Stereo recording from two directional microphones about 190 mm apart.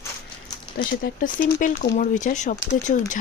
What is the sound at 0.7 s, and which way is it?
Speech, 50° left (ahead or behind).